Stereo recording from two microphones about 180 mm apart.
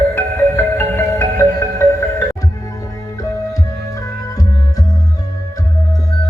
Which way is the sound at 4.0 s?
20° left (ahead or behind).